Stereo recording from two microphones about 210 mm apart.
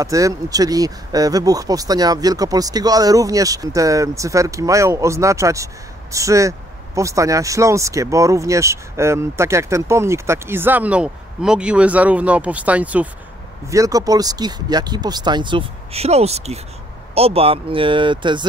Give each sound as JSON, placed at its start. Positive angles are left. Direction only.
{"t": 0.0, "sound": "speech", "side_deg": -15}